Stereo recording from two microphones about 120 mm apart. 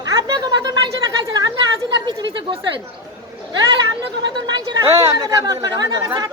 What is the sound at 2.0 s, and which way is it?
Speech, 40° right (ahead or behind).